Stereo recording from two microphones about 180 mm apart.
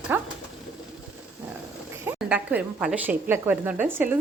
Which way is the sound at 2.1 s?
5° right (ahead or behind).